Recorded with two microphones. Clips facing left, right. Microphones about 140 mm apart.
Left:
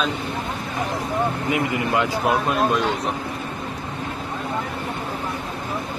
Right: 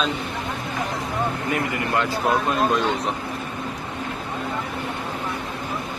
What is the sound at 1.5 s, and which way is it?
Speech, 20° left (ahead or behind).